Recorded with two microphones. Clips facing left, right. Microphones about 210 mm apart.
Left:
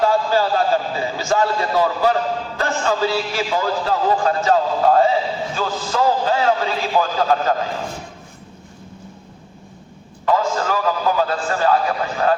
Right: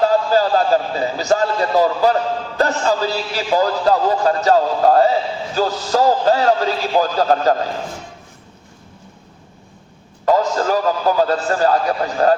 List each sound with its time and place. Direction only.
0.0 s a sound: 40° right (ahead or behind)
2.6 s a man's voice: 40° right (ahead or behind)
10.2 s a man's voice: 40° right (ahead or behind)